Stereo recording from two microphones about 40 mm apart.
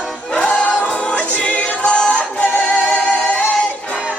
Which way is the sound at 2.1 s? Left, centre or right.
Left.